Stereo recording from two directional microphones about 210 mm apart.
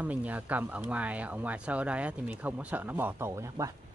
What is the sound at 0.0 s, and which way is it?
Speech, 5° right (ahead or behind).